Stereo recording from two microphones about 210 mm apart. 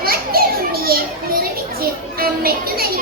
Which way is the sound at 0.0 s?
45° right (ahead or behind).